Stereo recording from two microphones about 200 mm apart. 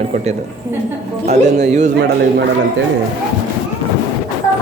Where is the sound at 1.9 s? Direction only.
55° right (ahead or behind).